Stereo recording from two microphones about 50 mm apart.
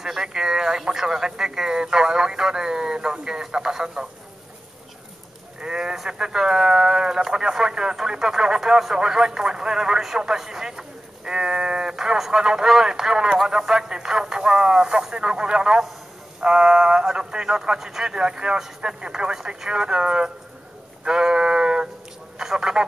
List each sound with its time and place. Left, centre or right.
0.0 s speech: centre
5.6 s speech: centre
21.0 s a sound: centre